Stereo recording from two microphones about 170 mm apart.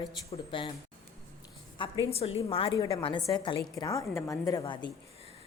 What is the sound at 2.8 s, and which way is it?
A woman's voice, 20° left (ahead or behind).